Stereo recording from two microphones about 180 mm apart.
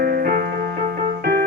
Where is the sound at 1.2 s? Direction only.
60° right (ahead or behind).